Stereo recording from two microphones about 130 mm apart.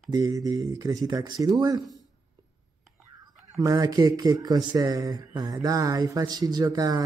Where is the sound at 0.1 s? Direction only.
30° right (ahead or behind).